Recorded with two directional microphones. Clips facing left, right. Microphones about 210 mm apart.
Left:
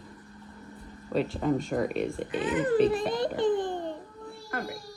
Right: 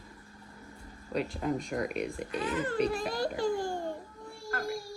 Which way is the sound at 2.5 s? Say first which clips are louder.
Left 6 dB; 20° left (ahead or behind).